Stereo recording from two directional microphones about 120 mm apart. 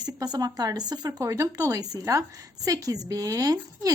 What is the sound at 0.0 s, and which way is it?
A woman's voice, 30° right (ahead or behind).